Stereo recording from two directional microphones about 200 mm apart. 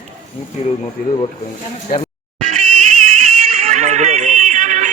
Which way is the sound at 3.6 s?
35° right (ahead or behind).